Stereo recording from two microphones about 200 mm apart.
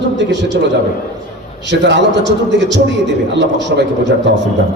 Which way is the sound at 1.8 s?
60° right (ahead or behind).